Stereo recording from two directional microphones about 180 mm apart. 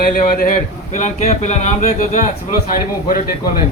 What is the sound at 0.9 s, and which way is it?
Speech, 40° left (ahead or behind).